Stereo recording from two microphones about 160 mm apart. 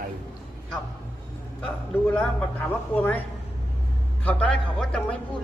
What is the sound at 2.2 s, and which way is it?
Speech, 10° left (ahead or behind).